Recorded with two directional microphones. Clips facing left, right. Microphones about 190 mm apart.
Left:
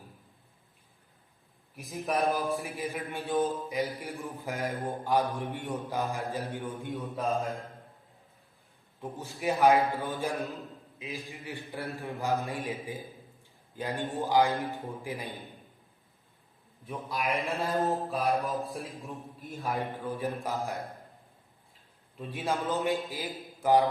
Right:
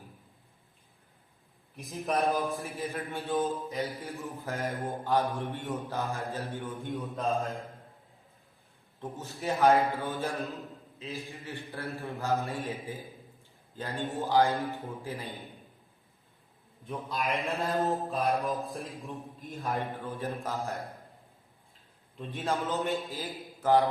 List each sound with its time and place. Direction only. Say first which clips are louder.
1.7 s mantra: even; centre (ahead or behind)
2.6 s a man's voice: even; 15° left (ahead or behind)
7.2 s mantra: even; centre (ahead or behind)
9.0 s a man's voice: left 1 dB; 10° left (ahead or behind)
16.8 s a man's voice: even; 10° left (ahead or behind)
17.2 s mantra: left 1 dB; centre (ahead or behind)
19.8 s a man's voice: left 2 dB; 15° left (ahead or behind)
22.2 s a man's voice: even; 10° left (ahead or behind)